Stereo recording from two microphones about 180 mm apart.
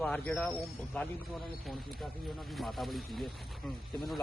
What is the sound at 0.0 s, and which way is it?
Speech, 5° left (ahead or behind).